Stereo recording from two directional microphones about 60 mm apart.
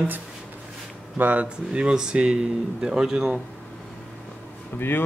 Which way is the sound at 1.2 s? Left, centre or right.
Right.